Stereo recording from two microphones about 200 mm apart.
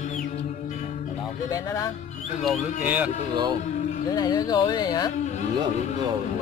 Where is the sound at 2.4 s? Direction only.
5° right (ahead or behind).